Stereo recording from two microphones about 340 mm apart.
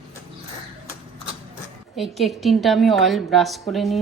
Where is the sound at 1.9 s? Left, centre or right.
Centre.